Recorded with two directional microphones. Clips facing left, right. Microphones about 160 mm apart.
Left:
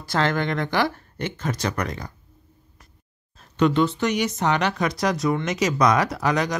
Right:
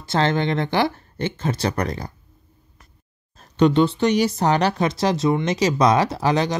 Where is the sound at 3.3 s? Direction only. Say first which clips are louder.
Right 3 dB; 35° right (ahead or behind).